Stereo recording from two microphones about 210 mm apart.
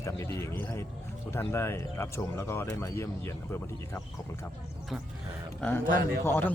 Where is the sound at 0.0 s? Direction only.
15° left (ahead or behind).